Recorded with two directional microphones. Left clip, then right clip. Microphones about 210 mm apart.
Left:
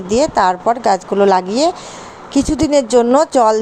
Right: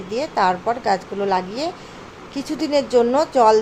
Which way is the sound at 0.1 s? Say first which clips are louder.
Left 6 dB; 35° left (ahead or behind).